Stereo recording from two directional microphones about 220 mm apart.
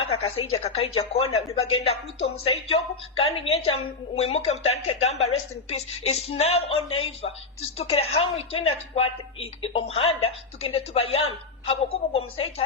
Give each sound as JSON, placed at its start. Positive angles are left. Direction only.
{"t": 0.0, "sound": "a woman's voice", "side_deg": 25}
{"t": 8.6, "sound": "speech", "side_deg": 70}
{"t": 9.4, "sound": "speech", "side_deg": 25}